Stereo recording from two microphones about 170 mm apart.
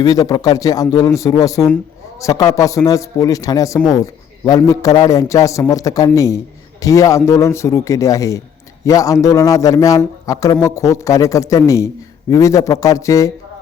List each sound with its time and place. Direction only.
0.0 s a man's voice: 20° left (ahead or behind)